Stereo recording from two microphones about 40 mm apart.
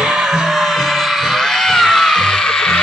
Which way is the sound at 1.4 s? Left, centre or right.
Centre.